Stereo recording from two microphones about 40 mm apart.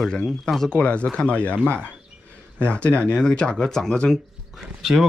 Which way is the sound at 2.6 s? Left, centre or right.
Left.